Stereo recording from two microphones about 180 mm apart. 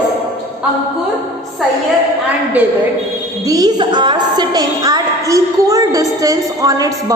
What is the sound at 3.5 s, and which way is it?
A woman's voice, 20° right (ahead or behind).